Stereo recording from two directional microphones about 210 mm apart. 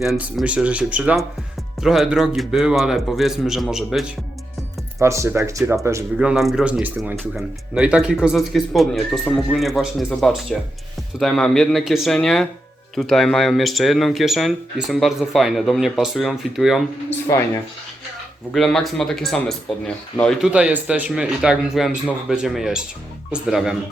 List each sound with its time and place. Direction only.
0.0 s speech: centre (ahead or behind)
4.9 s speech: 15° right (ahead or behind)
17.2 s speech: 15° left (ahead or behind)
18.5 s speech: centre (ahead or behind)